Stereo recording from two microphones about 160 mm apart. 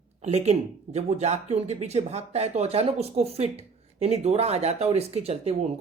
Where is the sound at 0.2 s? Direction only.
45° right (ahead or behind).